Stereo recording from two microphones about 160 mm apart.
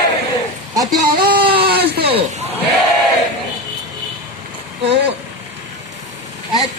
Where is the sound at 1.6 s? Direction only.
85° right.